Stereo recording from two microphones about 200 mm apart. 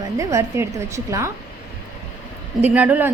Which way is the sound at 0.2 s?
15° right (ahead or behind).